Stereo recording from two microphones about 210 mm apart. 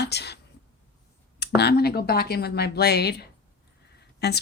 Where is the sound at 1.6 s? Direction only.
50° left (ahead or behind).